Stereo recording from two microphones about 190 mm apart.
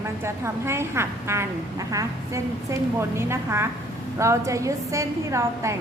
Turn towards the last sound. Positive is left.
turn(degrees=-15)  # may be behind; listen again after turning